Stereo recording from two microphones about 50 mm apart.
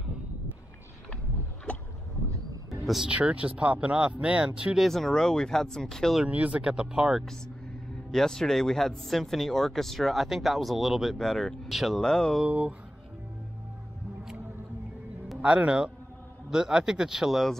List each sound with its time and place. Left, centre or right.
2.8 s speech: centre
3.1 s speech: right
4.7 s speech: centre
6.2 s speech: right
6.7 s speech: centre
8.1 s speech: centre
12.0 s speech: centre
12.4 s speech: right
15.4 s speech: right
16.4 s speech: centre